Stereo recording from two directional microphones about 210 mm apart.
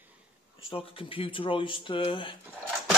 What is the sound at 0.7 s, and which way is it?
Speech, 25° left (ahead or behind).